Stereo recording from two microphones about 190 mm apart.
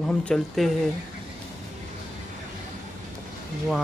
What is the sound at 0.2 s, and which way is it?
Speech, 5° left (ahead or behind).